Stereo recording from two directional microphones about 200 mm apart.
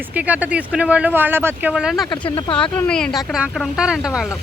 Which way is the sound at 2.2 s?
25° left (ahead or behind).